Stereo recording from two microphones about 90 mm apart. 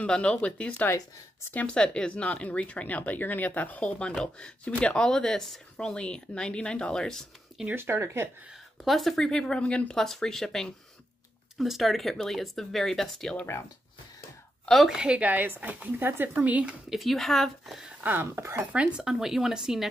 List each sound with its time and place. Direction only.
0.0 s speech: 10° left (ahead or behind)
7.7 s speech: 25° right (ahead or behind)
8.8 s speech: centre (ahead or behind)
14.7 s speech: 5° right (ahead or behind)
16.9 s speech: centre (ahead or behind)
18.0 s speech: 20° right (ahead or behind)
18.9 s speech: 5° right (ahead or behind)